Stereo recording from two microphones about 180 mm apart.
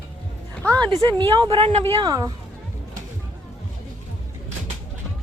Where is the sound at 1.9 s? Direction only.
20° right (ahead or behind).